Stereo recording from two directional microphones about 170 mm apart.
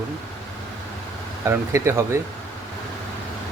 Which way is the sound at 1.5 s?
15° right (ahead or behind).